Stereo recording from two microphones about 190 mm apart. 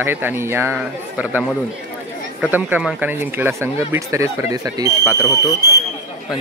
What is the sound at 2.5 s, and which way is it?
Speech, 5° right (ahead or behind).